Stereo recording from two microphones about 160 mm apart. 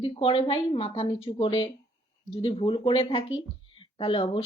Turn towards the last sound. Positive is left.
turn(degrees=35)  # may be behind; listen again after turning